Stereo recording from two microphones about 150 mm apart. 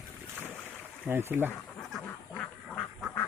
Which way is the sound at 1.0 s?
15° right (ahead or behind).